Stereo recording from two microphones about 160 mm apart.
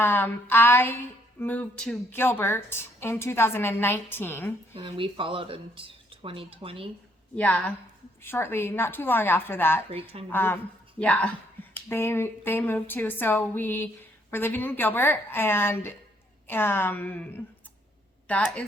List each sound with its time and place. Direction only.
0.0 s a woman's voice: 10° left (ahead or behind)
4.7 s speech: 35° right (ahead or behind)
7.3 s a woman's voice: 10° left (ahead or behind)
9.9 s speech: 35° right (ahead or behind)
10.2 s a woman's voice: 10° left (ahead or behind)